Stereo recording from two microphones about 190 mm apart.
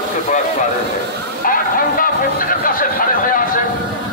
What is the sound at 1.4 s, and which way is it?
Speech, 45° left (ahead or behind).